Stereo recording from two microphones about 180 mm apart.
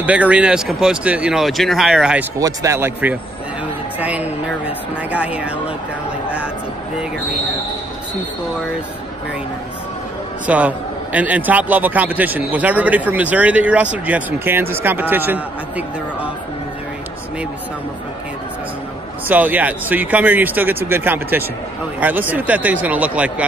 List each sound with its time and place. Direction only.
0.0 s speech: 5° right (ahead or behind)
2.3 s a man's voice: 20° right (ahead or behind)
10.4 s a man's voice: 10° right (ahead or behind)
19.2 s a man's voice: 10° right (ahead or behind)